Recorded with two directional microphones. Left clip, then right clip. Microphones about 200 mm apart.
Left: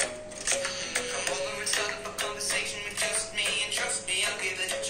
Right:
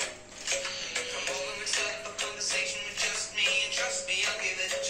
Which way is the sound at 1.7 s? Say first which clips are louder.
Left 1 dB; 55° left (ahead or behind).